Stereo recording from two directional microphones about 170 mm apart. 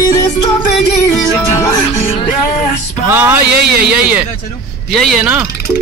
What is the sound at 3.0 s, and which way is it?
Music, 15° right (ahead or behind).